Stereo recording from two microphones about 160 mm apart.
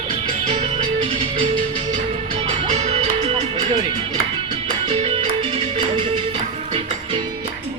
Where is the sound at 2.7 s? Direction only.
45° right (ahead or behind).